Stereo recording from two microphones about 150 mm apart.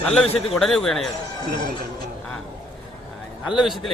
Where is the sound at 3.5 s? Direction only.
Centre (ahead or behind).